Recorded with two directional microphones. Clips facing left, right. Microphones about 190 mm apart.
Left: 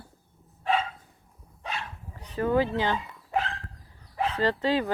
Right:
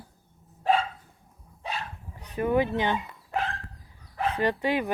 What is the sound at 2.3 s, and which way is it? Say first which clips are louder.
Speech: even; 15° right (ahead or behind).